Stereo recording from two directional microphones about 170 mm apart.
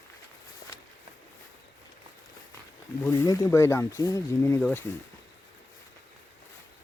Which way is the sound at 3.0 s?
20° left (ahead or behind).